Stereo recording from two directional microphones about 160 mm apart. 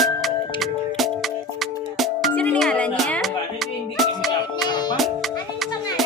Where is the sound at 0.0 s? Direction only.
Centre (ahead or behind).